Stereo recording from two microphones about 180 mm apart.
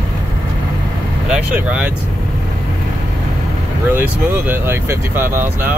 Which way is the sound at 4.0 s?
10° right (ahead or behind).